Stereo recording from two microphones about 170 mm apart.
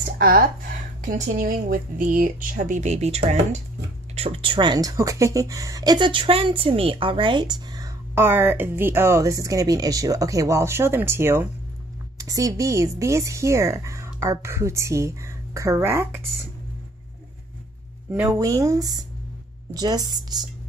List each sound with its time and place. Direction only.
0.2 s speech: 60° right (ahead or behind); by 16.3 s 15° right (ahead or behind)
18.1 s speech: 20° right (ahead or behind)